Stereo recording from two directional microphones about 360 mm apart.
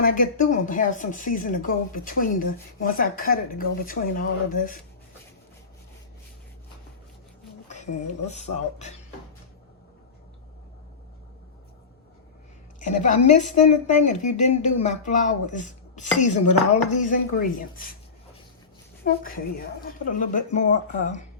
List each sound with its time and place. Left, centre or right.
0.0 s a woman's voice: left
8.3 s speech: centre
12.8 s a woman's voice: left
19.8 s a woman's voice: left